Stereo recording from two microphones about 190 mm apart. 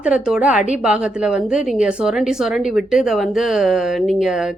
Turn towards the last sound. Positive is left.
turn(degrees=0)  # may be behind; listen again after turning